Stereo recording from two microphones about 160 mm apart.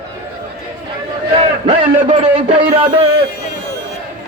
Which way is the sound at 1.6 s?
30° right (ahead or behind).